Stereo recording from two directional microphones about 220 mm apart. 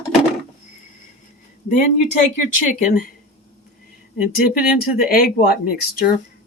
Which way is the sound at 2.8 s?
40° left (ahead or behind).